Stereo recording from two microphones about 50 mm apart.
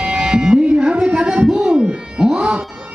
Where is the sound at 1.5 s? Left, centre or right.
Centre.